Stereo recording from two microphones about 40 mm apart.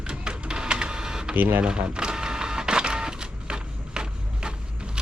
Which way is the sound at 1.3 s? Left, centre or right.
Right.